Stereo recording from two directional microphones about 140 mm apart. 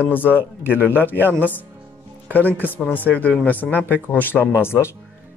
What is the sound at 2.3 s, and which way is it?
Speech, 15° left (ahead or behind).